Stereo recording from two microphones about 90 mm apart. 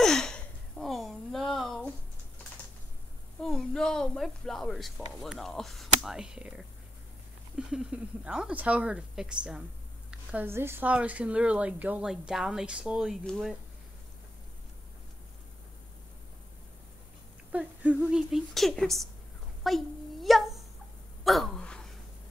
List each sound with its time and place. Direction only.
0.0 s a sound: 5° left (ahead or behind)
3.3 s speech: 5° left (ahead or behind)
10.4 s a woman's voice: 25° right (ahead or behind)
10.9 s speech: 15° right (ahead or behind)
12.1 s speech: 5° right (ahead or behind)
17.5 s speech: 15° right (ahead or behind)
18.5 s speech: centre (ahead or behind)
19.6 s a sound: centre (ahead or behind)